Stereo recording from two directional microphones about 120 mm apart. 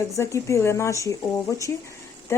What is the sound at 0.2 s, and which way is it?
Speech, 25° left (ahead or behind).